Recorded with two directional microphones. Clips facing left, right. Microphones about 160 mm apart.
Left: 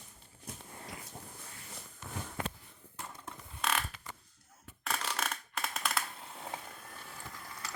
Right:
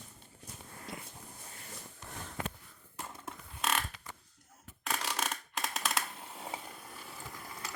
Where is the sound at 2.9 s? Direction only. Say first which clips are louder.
Right 2 dB; 15° right (ahead or behind).